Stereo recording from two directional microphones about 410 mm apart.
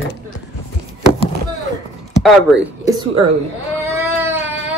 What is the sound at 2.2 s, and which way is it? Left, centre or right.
Speech, centre.